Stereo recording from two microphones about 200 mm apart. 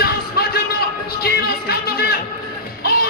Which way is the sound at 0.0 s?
50° left (ahead or behind).